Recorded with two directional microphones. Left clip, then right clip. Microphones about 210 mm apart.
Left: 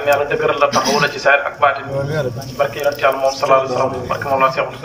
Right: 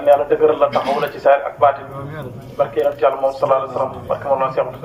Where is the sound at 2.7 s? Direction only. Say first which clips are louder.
Right 1 dB; 25° right (ahead or behind).